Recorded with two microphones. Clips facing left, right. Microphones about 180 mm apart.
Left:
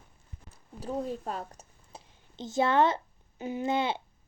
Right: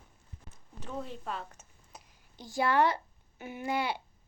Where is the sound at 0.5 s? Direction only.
35° left (ahead or behind).